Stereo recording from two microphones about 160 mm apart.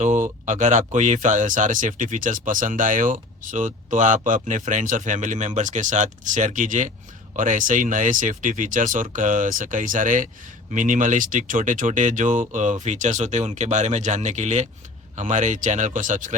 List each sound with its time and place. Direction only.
0.0 s speech: 50° right (ahead or behind)